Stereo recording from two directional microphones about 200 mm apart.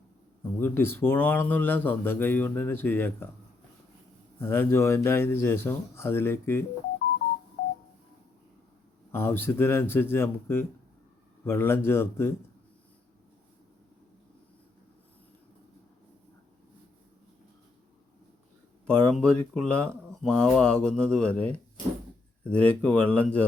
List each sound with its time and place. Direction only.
0.6 s speech: 10° left (ahead or behind)
4.4 s speech: 10° left (ahead or behind)
7.6 s telephone dialing: 60° left (ahead or behind)
9.1 s speech: 10° left (ahead or behind)
19.0 s speech: 5° left (ahead or behind)